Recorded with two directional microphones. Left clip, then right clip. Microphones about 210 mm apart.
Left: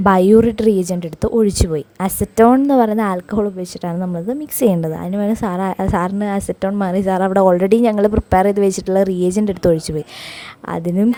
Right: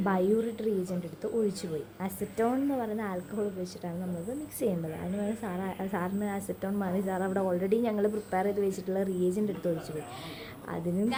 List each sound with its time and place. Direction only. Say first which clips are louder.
0.0 s a woman's voice: left 17 dB; 45° left (ahead or behind)
10.7 s a woman's voice: left 13 dB; 45° left (ahead or behind)